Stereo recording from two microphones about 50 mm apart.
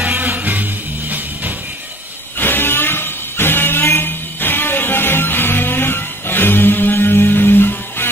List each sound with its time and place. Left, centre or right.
0.0 s music: right
2.3 s music: left